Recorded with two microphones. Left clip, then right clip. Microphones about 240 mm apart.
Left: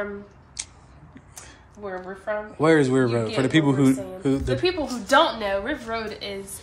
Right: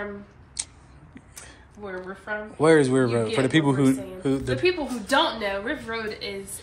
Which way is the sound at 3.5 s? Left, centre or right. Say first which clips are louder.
Left 4 dB; centre.